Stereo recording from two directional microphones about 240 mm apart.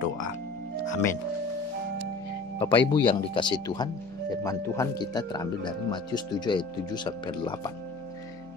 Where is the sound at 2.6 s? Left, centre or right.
Left.